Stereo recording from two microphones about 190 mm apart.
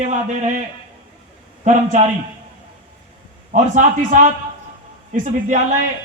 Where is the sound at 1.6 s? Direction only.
40° right (ahead or behind).